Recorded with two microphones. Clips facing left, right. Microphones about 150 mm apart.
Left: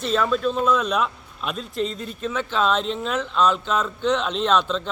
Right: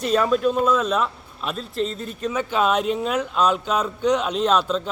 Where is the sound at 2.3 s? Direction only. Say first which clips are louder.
Right 1 dB; 10° right (ahead or behind).